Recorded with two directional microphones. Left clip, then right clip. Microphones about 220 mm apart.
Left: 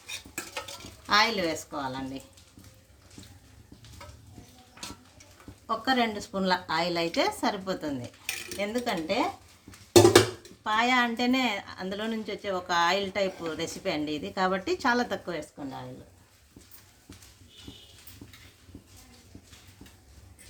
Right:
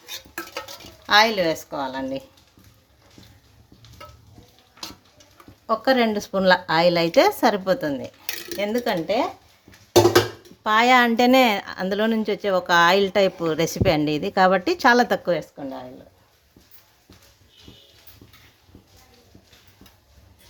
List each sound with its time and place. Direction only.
1.0 s speech: 45° right (ahead or behind)
5.6 s a woman's voice: 45° right (ahead or behind)
10.6 s a woman's voice: 45° right (ahead or behind)